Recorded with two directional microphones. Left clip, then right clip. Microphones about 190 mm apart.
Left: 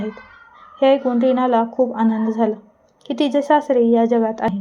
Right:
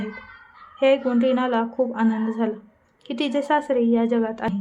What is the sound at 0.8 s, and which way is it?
A woman's voice, 15° left (ahead or behind).